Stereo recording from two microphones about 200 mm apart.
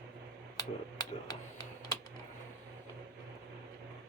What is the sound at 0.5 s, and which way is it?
Computer keyboard, 20° left (ahead or behind).